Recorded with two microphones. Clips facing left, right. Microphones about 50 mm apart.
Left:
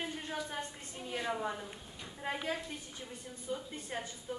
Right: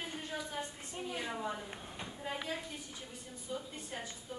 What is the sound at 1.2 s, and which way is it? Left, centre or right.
Speech, centre.